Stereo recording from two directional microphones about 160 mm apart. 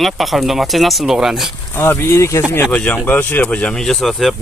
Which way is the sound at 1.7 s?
15° left (ahead or behind).